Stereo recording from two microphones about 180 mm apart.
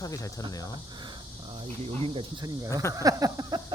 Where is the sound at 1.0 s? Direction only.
30° right (ahead or behind).